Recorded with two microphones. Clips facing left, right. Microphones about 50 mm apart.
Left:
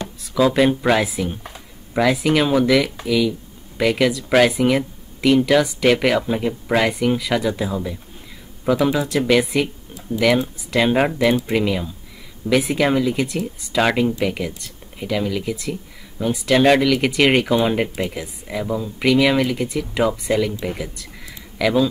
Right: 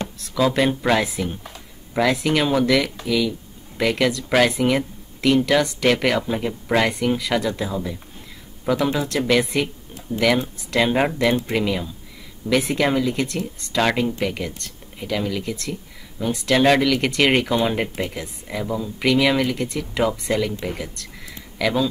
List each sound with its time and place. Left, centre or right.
0.2 s speech: centre
1.3 s a sound: left
2.0 s speech: centre